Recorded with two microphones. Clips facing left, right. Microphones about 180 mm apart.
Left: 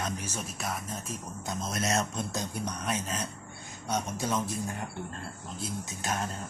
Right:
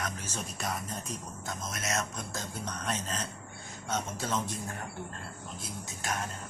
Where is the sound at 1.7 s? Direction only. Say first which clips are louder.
Left 5 dB; 30° left (ahead or behind); by 4.6 s 10° left (ahead or behind).